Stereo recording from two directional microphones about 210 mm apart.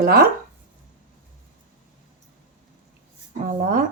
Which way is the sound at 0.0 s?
45° right (ahead or behind).